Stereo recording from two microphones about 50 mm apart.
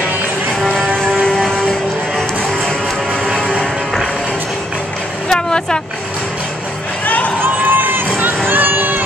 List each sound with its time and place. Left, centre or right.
0.6 s vehicle: centre
5.3 s vehicle: centre
7.4 s run: right
8.5 s a sound: right